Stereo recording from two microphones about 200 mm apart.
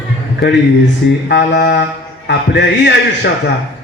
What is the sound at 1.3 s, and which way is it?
Speech, 55° left (ahead or behind).